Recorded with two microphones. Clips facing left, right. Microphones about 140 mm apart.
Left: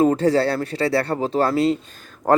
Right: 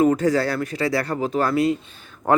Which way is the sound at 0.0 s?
30° left (ahead or behind).